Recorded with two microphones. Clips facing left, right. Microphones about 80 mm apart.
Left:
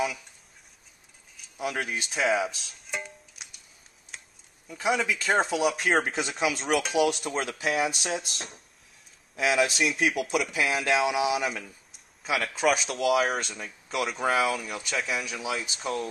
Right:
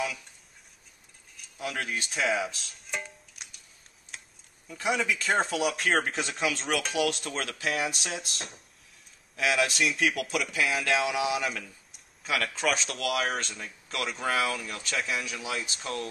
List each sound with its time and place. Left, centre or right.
1.6 s music: centre
4.1 s a sound: centre
4.6 s speech: centre
7.7 s speech: centre
11.1 s speech: centre
11.9 s speech: centre
15.0 s speech: centre